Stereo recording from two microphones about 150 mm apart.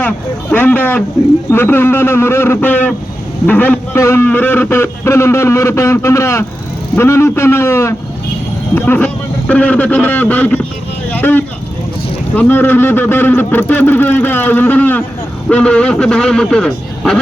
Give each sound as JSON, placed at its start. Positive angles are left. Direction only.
{"t": 0.5, "sound": "a man's voice", "side_deg": 10}
{"t": 11.1, "sound": "vehicle", "side_deg": 10}
{"t": 12.3, "sound": "a man's voice", "side_deg": 10}